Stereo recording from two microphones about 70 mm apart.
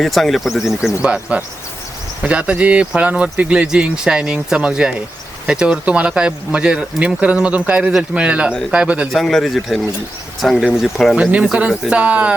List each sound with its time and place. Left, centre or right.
0.0 s speech: centre
9.1 s speech: centre
11.2 s speech: centre